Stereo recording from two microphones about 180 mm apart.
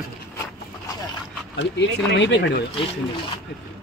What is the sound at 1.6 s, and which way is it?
Speech, 80° left.